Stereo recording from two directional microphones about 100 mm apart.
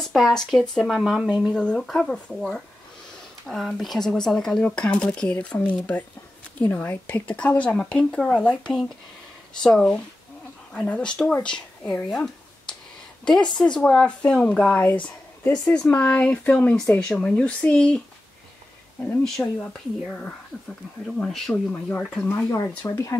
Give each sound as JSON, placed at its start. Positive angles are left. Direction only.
{"t": 0.0, "sound": "speech", "side_deg": 0}
{"t": 1.5, "sound": "speech", "side_deg": 10}
{"t": 13.2, "sound": "speech", "side_deg": 5}
{"t": 19.4, "sound": "speech", "side_deg": 10}
{"t": 22.8, "sound": "speech", "side_deg": 30}